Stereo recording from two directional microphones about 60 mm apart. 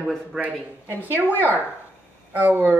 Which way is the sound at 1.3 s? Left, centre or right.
Left.